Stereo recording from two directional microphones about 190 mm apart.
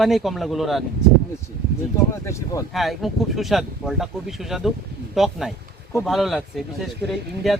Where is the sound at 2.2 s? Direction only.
15° left (ahead or behind).